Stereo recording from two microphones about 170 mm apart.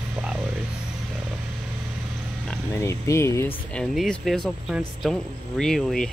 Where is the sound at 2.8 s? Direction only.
15° left (ahead or behind).